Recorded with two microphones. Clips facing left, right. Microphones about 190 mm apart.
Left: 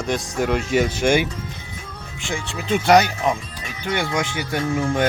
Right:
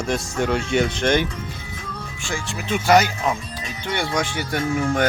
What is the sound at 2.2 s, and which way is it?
Speech, 20° left (ahead or behind).